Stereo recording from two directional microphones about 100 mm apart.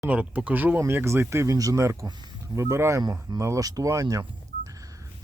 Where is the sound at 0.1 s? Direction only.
15° right (ahead or behind); by 4.2 s 35° right (ahead or behind).